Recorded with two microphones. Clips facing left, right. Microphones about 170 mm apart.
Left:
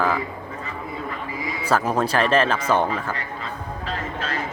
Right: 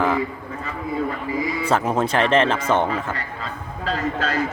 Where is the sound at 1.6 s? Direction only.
25° right (ahead or behind).